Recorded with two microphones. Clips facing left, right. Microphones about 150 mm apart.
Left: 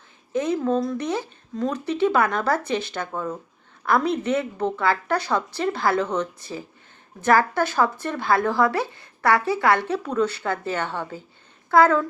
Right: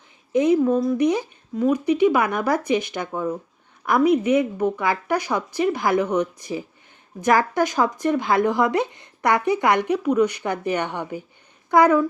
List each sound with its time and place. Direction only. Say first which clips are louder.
0.3 s speech: right 5 dB; 15° right (ahead or behind)